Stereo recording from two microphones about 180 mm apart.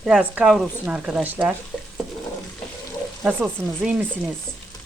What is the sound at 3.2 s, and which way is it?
Speech, 5° right (ahead or behind).